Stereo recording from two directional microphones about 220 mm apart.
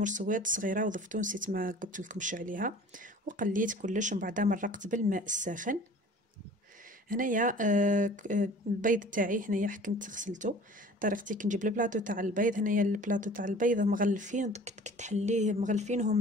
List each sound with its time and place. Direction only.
0.0 s speech: 35° right (ahead or behind)
7.1 s speech: 35° right (ahead or behind)